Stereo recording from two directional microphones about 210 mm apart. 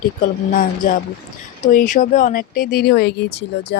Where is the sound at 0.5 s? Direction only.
40° left (ahead or behind).